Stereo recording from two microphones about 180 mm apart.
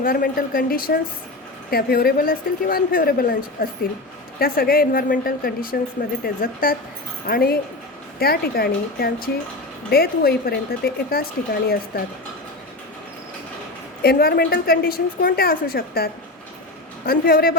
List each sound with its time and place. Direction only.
0.0 s a woman's voice: 50° left (ahead or behind)
14.0 s a woman's voice: 60° left (ahead or behind)
17.1 s a woman's voice: 55° left (ahead or behind)